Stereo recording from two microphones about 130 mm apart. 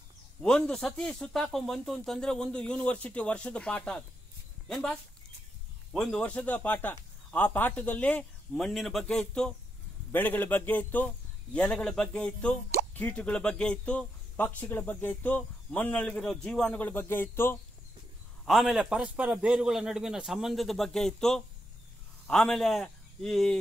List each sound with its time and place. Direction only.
0.4 s speech: 5° left (ahead or behind)
5.9 s speech: 5° left (ahead or behind)
18.4 s a man's voice: centre (ahead or behind)